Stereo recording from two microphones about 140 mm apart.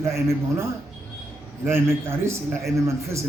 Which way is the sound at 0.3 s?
20° right (ahead or behind).